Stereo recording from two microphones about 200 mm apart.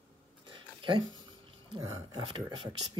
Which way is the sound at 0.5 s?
25° right (ahead or behind).